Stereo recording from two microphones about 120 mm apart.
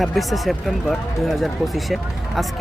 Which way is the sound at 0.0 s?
Centre (ahead or behind).